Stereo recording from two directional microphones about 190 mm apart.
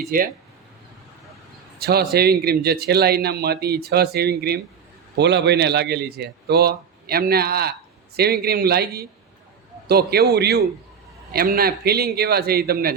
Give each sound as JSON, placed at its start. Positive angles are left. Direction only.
{"t": 0.1, "sound": "speech", "side_deg": -45}
{"t": 1.8, "sound": "a man's voice", "side_deg": -55}